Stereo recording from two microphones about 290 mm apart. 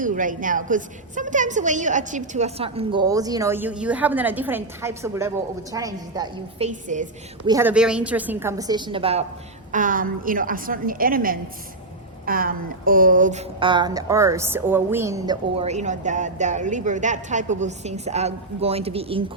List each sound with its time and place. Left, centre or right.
0.0 s speech: right
7.4 s a woman's voice: centre